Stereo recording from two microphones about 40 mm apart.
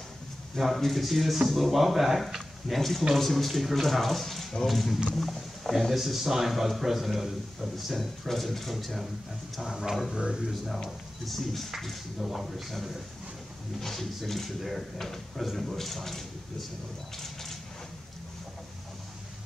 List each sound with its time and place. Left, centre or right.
0.6 s speech: centre
11.2 s speech: centre
17.2 s a sound: centre